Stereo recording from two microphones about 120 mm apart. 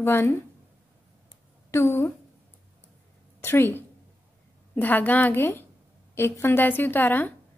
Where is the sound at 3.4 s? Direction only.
20° left (ahead or behind).